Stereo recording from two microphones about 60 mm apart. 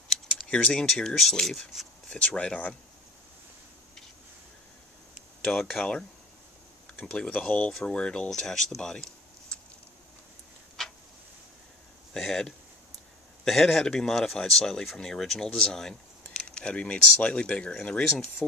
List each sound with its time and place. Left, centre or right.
0.1 s speech: centre
2.0 s speech: centre
5.6 s speech: centre
6.9 s speech: centre
10.8 s a sound: centre
12.2 s speech: centre